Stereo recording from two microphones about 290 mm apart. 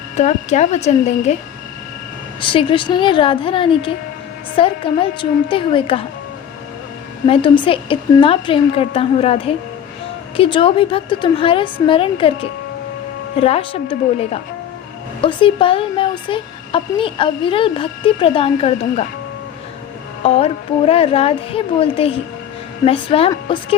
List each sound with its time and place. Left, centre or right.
0.2 s a woman's voice: left
2.4 s speech: centre
7.3 s a woman's voice: centre
20.2 s a woman's voice: left